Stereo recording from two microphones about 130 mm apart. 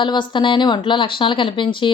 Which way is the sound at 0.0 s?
40° left (ahead or behind).